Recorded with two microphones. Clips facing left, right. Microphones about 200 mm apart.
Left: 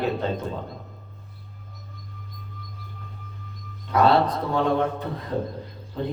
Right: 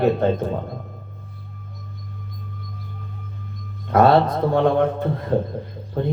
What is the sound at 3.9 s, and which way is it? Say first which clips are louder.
Speech: right 4 dB; 50° right (ahead or behind).